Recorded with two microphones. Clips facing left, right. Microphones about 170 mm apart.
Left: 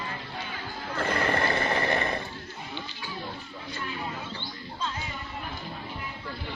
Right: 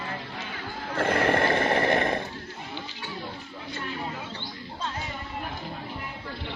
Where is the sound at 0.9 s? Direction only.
55° right (ahead or behind).